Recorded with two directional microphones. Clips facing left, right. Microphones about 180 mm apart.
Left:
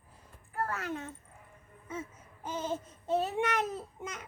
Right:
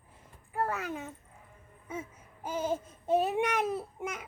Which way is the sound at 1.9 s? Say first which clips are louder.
Right 1 dB; 10° right (ahead or behind).